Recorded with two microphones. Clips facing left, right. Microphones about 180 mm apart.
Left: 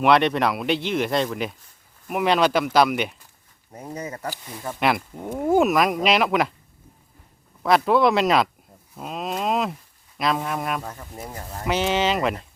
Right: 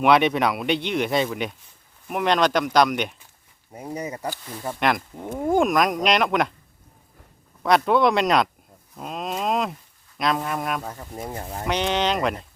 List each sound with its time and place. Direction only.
0.0 s speech: centre (ahead or behind)
3.7 s speech: 10° right (ahead or behind)
4.8 s speech: 5° left (ahead or behind)
7.6 s speech: centre (ahead or behind)
9.0 s a sound: centre (ahead or behind)
10.2 s speech: centre (ahead or behind)
10.9 s speech: 15° right (ahead or behind)
11.3 s speech: 30° right (ahead or behind)
11.6 s speech: 5° left (ahead or behind)